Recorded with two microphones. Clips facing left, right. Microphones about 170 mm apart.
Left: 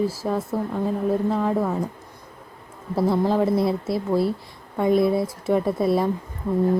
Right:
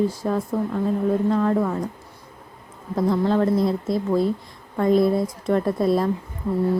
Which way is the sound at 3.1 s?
5° left (ahead or behind).